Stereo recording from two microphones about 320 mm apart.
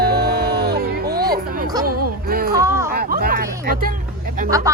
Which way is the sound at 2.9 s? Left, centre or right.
Right.